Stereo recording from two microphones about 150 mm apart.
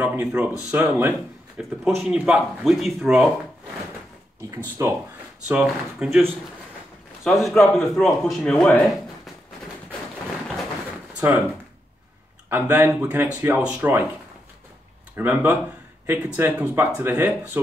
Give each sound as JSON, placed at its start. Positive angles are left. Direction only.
{"t": 0.0, "sound": "a man's voice", "side_deg": -10}
{"t": 4.5, "sound": "speech", "side_deg": -20}
{"t": 5.5, "sound": "a man's voice", "side_deg": -5}
{"t": 11.1, "sound": "speech", "side_deg": -15}
{"t": 12.4, "sound": "speech", "side_deg": -15}
{"t": 15.1, "sound": "speech", "side_deg": -10}